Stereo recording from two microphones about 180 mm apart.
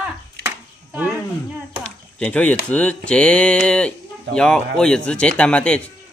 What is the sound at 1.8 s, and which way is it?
Speech, 5° left (ahead or behind).